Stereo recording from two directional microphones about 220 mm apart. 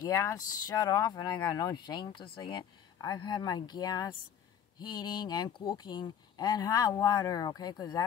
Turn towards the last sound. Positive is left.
turn(degrees=20)  # may be behind; listen again after turning